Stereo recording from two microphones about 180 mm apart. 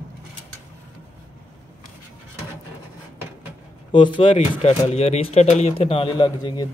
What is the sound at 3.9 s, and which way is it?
Speech, 25° left (ahead or behind).